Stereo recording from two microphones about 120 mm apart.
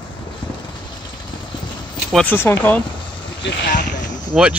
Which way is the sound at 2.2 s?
15° left (ahead or behind).